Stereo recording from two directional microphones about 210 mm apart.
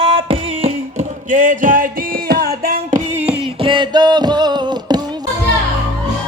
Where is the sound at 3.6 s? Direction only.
25° right (ahead or behind).